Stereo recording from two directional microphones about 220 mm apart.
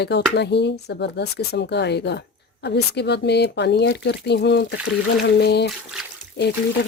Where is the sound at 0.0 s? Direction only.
50° left (ahead or behind).